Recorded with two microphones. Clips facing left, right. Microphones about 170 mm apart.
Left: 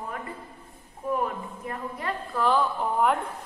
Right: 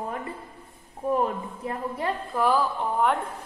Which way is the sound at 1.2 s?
25° right (ahead or behind).